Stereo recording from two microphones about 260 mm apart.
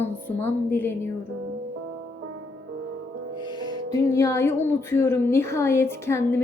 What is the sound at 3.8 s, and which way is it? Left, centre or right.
Speech, centre.